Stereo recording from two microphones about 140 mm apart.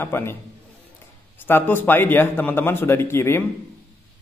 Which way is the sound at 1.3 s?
15° left (ahead or behind).